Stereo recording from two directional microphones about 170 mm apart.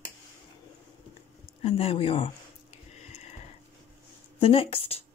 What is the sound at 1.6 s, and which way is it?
Speech, 35° left (ahead or behind).